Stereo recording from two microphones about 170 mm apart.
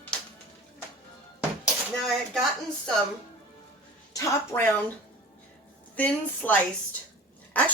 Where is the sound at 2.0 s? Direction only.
Centre (ahead or behind).